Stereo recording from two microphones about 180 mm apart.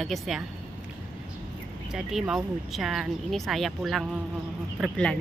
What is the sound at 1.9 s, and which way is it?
A woman's voice, centre (ahead or behind).